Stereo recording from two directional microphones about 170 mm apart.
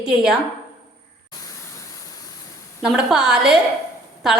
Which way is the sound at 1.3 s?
20° left (ahead or behind).